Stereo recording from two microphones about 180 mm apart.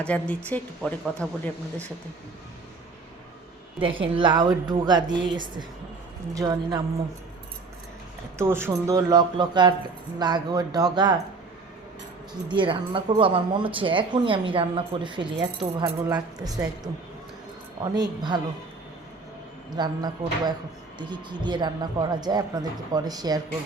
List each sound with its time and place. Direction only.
0.0 s speech: 5° left (ahead or behind)
3.8 s speech: 30° right (ahead or behind)
8.4 s speech: 15° right (ahead or behind)
12.5 s speech: 25° right (ahead or behind)
17.9 s speech: 25° right (ahead or behind)
19.7 s speech: 25° right (ahead or behind)